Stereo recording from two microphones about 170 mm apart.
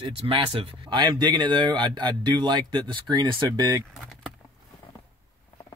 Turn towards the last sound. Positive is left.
turn(degrees=-25)  # may be behind; listen again after turning